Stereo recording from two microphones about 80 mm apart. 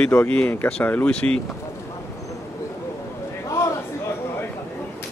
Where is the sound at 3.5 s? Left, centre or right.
Left.